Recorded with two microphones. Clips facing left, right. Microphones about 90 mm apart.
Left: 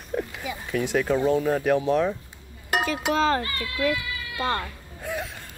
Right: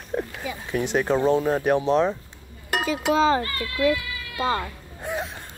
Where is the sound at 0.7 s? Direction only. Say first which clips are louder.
Right 1 dB; 20° right (ahead or behind).